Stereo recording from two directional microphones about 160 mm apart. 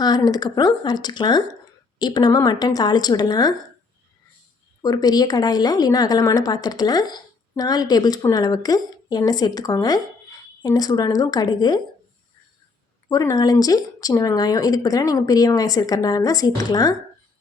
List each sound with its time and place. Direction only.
0.0 s a woman's voice: 25° left (ahead or behind)
4.8 s a woman's voice: 25° left (ahead or behind)
13.1 s a woman's voice: 20° left (ahead or behind)